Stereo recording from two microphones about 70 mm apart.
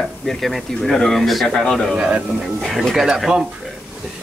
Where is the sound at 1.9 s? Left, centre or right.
Centre.